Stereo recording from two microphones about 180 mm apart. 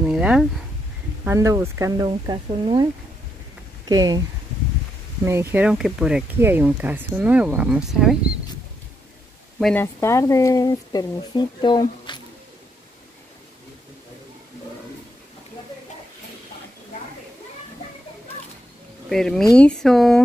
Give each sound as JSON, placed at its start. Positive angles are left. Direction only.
{"t": 0.0, "sound": "speech", "side_deg": -5}
{"t": 1.2, "sound": "speech", "side_deg": -15}
{"t": 5.2, "sound": "speech", "side_deg": -15}
{"t": 9.6, "sound": "speech", "side_deg": 5}
{"t": 9.9, "sound": "speech", "side_deg": 15}
{"t": 19.0, "sound": "speech", "side_deg": 0}